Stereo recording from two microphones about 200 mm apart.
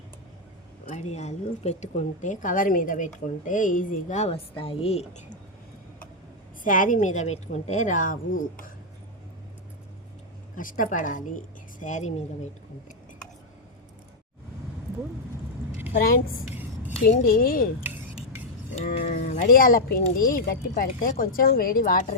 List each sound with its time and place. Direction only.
1.1 s a woman's voice: 35° left (ahead or behind)
6.7 s a woman's voice: 40° left (ahead or behind)
10.6 s a woman's voice: 40° left (ahead or behind)
15.9 s a woman's voice: 45° left (ahead or behind)
18.9 s speech: 50° left (ahead or behind)